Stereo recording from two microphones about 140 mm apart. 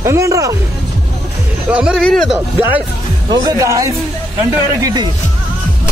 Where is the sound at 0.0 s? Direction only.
20° right (ahead or behind).